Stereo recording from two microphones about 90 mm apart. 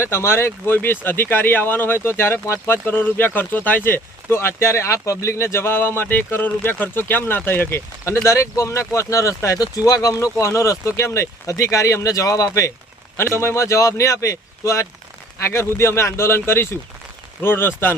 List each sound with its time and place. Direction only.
0.0 s speech: 30° left (ahead or behind)